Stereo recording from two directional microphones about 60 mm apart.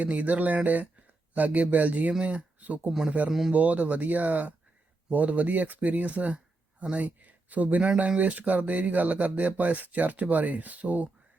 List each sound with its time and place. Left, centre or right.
0.0 s speech: right
3.2 s speech: centre
3.5 s speech: right